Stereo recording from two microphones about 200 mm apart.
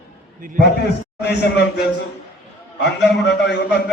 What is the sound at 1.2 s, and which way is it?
Speech, 55° left (ahead or behind).